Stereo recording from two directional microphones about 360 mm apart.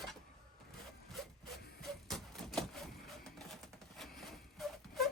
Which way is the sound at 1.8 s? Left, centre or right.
Centre.